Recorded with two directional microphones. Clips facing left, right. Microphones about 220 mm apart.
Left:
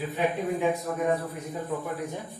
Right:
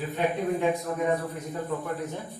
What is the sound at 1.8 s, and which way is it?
Speech, 10° left (ahead or behind).